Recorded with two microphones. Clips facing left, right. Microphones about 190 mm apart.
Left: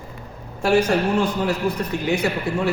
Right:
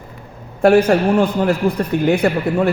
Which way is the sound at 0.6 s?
55° right (ahead or behind).